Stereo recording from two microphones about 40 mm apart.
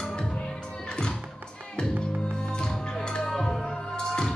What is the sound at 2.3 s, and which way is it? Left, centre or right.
Music, left.